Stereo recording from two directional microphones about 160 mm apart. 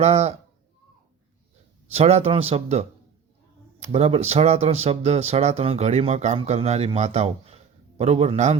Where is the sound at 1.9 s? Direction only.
40° right (ahead or behind).